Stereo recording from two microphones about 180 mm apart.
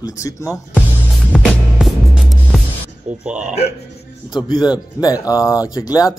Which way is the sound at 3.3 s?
5° right (ahead or behind).